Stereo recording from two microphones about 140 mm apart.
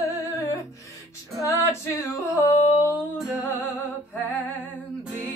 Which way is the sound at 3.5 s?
15° left (ahead or behind).